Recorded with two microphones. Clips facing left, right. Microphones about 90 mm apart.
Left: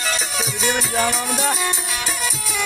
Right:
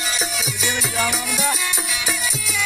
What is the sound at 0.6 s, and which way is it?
Music, 45° left (ahead or behind).